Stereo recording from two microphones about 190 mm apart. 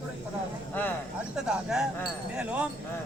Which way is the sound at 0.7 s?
10° left (ahead or behind).